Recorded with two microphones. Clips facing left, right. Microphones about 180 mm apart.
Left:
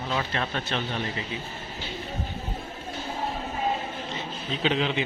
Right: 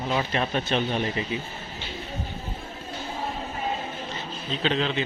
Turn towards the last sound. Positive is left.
turn(degrees=10)  # may be behind; listen again after turning